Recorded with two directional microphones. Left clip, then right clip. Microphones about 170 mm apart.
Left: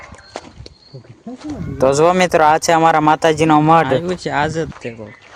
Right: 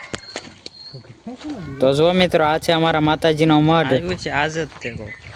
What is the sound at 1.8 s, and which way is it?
Speech, 15° left (ahead or behind).